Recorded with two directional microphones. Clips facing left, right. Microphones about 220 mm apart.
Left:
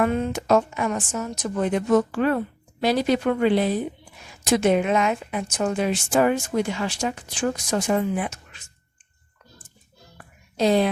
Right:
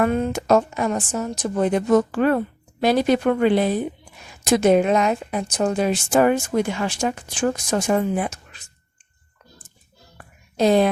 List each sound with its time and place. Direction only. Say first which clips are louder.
0.0 s a woman's voice: right 2 dB; 45° right (ahead or behind)
4.4 s a woman's voice: right 3 dB; 40° right (ahead or behind)
10.6 s a woman's voice: right 3 dB; 50° right (ahead or behind)